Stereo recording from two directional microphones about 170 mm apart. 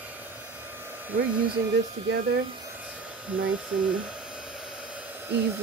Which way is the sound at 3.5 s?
5° right (ahead or behind).